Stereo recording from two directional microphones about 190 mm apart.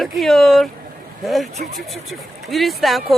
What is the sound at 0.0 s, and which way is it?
Speech, centre (ahead or behind).